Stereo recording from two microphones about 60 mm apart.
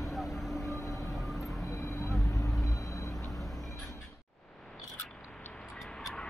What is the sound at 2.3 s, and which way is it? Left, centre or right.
Vehicle, left.